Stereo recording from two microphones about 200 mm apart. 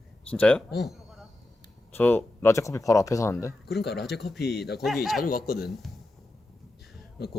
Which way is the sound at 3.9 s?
Centre (ahead or behind).